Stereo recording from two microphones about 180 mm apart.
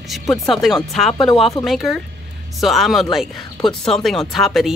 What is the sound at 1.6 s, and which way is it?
Speech, centre (ahead or behind).